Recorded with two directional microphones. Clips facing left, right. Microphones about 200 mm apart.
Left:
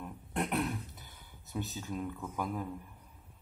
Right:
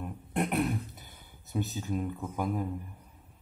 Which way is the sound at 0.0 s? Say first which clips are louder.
Right 4 dB; 15° right (ahead or behind).